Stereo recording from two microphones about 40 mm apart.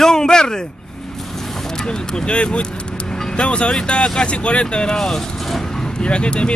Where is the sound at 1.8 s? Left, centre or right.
Left.